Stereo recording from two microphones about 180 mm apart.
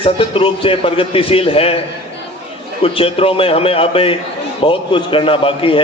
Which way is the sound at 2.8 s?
30° left (ahead or behind).